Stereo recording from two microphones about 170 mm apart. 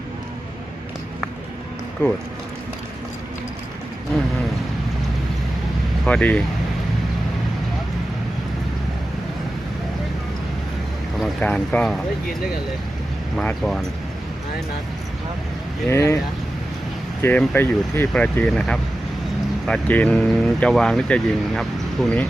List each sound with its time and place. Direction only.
2.0 s speech: 15° left (ahead or behind)
6.1 s speech: 5° left (ahead or behind)
11.2 s speech: 5° left (ahead or behind)
13.3 s speech: 5° left (ahead or behind)
15.9 s speech: 15° left (ahead or behind)
17.2 s speech: 10° left (ahead or behind)